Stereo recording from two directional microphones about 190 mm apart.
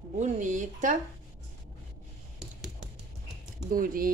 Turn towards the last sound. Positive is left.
turn(degrees=-50)  # may be behind; listen again after turning